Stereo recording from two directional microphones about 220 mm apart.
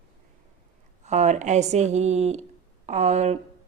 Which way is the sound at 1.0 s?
30° right (ahead or behind).